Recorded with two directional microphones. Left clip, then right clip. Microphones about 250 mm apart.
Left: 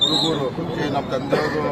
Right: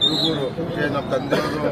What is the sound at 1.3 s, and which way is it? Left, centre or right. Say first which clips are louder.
Speech: left 3 dB; right.